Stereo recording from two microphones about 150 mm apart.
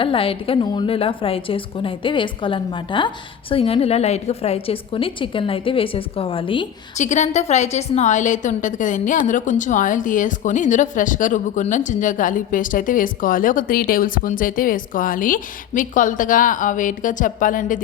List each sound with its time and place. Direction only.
0.0 s a woman's voice: 35° left (ahead or behind)
6.9 s a woman's voice: 50° left (ahead or behind)